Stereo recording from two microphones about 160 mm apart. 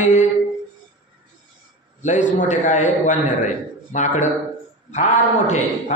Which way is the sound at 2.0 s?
50° left (ahead or behind).